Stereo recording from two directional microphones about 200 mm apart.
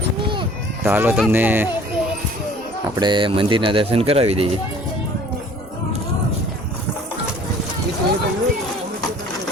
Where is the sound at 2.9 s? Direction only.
25° right (ahead or behind).